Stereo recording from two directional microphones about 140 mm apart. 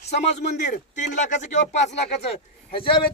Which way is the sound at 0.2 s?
50° left (ahead or behind).